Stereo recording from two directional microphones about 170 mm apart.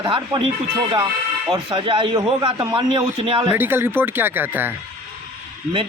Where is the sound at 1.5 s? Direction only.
30° right (ahead or behind).